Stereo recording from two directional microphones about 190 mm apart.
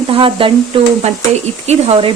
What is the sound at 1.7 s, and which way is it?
Stir, 30° right (ahead or behind).